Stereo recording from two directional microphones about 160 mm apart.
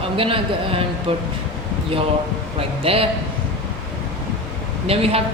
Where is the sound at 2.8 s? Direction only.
35° right (ahead or behind).